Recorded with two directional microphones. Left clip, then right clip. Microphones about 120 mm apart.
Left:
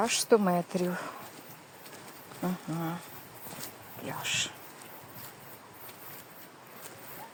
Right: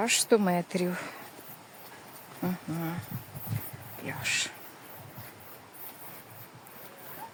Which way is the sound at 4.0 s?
25° right (ahead or behind).